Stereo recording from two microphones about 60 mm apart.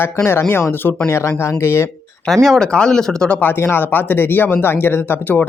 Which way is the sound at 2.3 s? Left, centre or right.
Centre.